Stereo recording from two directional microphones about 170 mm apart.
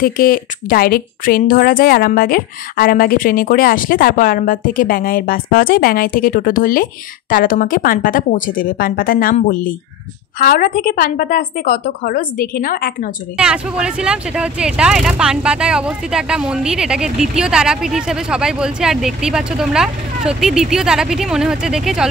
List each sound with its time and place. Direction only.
0.0 s a woman's voice: 55° left (ahead or behind)
13.4 s speech: 5° right (ahead or behind)